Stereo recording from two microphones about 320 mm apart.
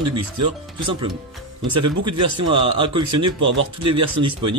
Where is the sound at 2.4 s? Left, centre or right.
Centre.